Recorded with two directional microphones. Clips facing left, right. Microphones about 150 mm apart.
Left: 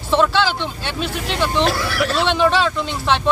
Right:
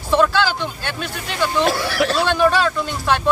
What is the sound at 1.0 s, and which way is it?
Speech, 25° left (ahead or behind).